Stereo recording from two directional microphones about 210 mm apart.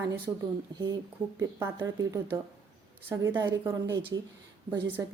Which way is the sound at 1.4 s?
15° right (ahead or behind).